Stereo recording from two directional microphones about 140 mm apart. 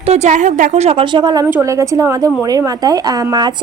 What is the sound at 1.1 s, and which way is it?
Speech, 30° right (ahead or behind).